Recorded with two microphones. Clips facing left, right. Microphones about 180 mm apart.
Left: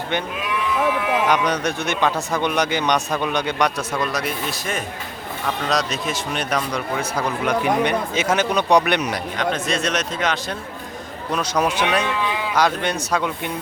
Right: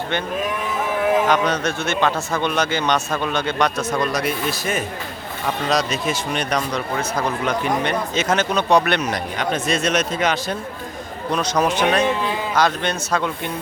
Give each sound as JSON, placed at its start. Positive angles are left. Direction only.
{"t": 0.4, "sound": "a sound", "side_deg": -45}
{"t": 1.3, "sound": "speech", "side_deg": 15}
{"t": 9.4, "sound": "speech", "side_deg": -5}
{"t": 11.3, "sound": "speech", "side_deg": 5}